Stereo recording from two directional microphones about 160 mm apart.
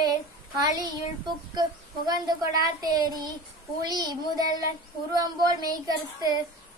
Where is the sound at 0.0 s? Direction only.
25° right (ahead or behind).